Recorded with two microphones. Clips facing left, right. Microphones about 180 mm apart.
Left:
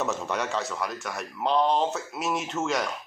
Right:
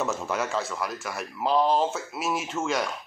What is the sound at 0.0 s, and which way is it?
Speech, centre (ahead or behind).